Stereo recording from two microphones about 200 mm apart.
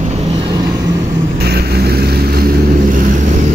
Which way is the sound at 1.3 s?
50° right (ahead or behind).